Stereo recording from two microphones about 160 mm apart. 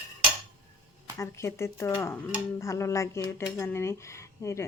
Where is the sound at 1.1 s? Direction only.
15° left (ahead or behind).